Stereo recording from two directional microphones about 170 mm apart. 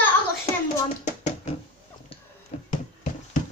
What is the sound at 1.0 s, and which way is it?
Hands, 40° left (ahead or behind).